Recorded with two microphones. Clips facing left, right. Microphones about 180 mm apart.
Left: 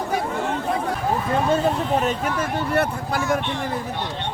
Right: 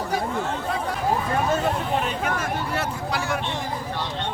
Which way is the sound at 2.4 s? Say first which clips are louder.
Left 5 dB; 55° left (ahead or behind).